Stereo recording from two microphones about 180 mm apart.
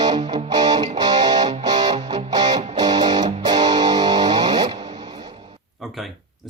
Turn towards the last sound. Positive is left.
turn(degrees=-25)  # may be behind; listen again after turning